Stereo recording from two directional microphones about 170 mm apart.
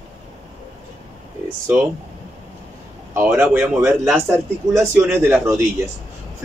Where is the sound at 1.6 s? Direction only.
10° right (ahead or behind).